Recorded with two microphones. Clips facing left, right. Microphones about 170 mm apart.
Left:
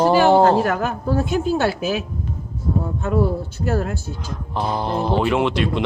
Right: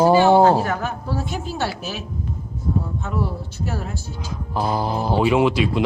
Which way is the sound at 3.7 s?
55° left (ahead or behind).